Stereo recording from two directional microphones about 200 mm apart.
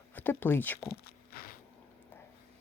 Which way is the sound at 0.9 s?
50° left (ahead or behind).